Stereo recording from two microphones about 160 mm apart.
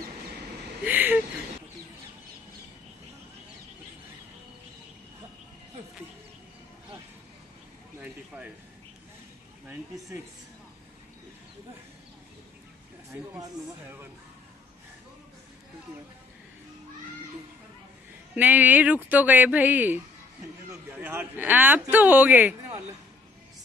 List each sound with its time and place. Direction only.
0.8 s a sound: 10° right (ahead or behind)
8.0 s a sound: 5° right (ahead or behind)
9.9 s a woman's voice: 20° right (ahead or behind)
13.1 s speech: 15° right (ahead or behind)
18.3 s speech: 10° right (ahead or behind)
21.0 s speech: 15° right (ahead or behind)